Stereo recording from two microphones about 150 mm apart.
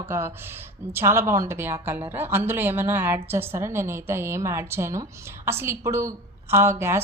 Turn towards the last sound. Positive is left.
turn(degrees=-15)  # may be behind; listen again after turning